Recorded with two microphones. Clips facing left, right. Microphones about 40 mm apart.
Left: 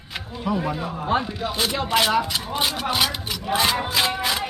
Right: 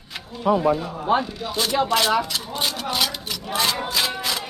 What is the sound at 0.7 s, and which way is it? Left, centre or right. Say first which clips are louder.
Speech: right 2 dB; centre.